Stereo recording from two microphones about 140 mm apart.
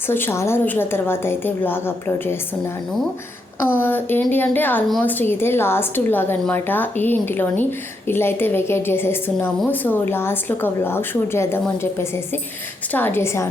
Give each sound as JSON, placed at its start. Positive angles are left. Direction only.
{"t": 0.1, "sound": "speech", "side_deg": 15}
{"t": 3.7, "sound": "speech", "side_deg": 15}